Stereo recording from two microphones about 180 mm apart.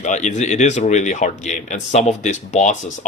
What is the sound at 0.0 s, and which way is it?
Speech, 40° left (ahead or behind).